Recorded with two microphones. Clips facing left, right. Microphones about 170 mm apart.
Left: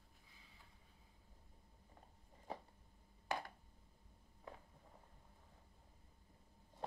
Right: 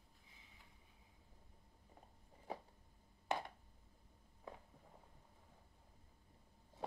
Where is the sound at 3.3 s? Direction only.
25° right (ahead or behind).